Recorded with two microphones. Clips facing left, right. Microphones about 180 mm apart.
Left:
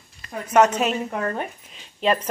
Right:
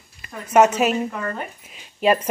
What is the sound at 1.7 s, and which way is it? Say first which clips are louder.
Keys jangling: right 4 dB; 10° right (ahead or behind).